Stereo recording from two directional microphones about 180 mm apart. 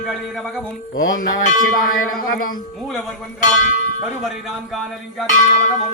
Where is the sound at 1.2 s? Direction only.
50° left (ahead or behind).